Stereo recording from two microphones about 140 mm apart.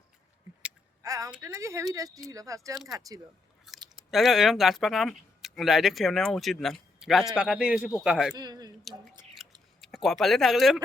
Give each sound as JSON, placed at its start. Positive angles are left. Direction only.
{"t": 1.0, "sound": "speech", "side_deg": -25}
{"t": 3.8, "sound": "a man's voice", "side_deg": 0}
{"t": 8.4, "sound": "speech", "side_deg": -30}
{"t": 8.8, "sound": "speech", "side_deg": 0}